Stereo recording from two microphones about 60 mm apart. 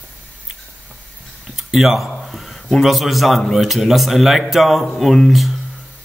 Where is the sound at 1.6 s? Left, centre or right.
Centre.